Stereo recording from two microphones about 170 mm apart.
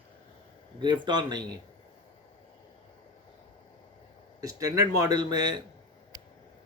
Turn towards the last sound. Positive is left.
turn(degrees=-25)  # may be behind; listen again after turning